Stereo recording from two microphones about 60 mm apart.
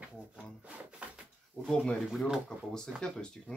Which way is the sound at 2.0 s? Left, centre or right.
Centre.